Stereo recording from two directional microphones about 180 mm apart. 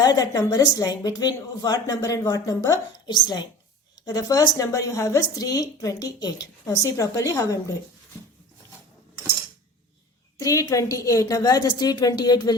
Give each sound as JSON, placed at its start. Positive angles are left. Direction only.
{"t": 0.0, "sound": "a woman's voice", "side_deg": 20}
{"t": 10.3, "sound": "a woman's voice", "side_deg": 20}